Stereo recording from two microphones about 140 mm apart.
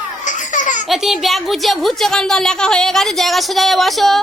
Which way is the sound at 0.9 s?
Centre (ahead or behind).